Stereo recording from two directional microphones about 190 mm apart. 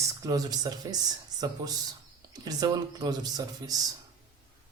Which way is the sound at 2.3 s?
20° right (ahead or behind).